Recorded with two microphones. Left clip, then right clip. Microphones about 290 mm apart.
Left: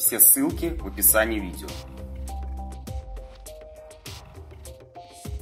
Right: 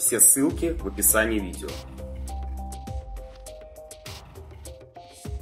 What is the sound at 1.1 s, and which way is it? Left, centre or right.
Speech, centre.